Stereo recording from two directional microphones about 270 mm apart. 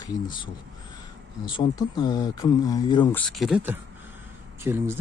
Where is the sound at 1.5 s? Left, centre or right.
Centre.